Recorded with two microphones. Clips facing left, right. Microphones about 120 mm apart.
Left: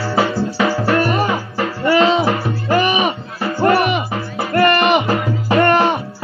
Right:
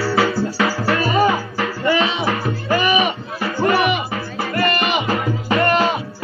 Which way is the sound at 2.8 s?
45° left (ahead or behind).